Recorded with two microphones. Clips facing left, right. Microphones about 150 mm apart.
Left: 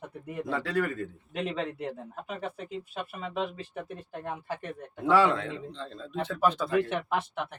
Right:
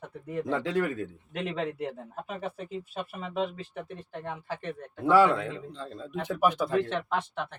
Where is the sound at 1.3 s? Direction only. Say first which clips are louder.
Even; centre (ahead or behind).